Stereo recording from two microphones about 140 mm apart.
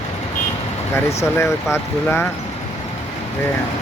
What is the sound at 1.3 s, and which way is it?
Speech, 20° left (ahead or behind).